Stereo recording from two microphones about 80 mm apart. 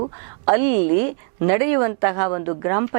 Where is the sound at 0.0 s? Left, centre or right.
Centre.